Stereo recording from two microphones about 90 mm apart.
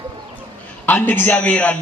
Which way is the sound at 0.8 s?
20° left (ahead or behind).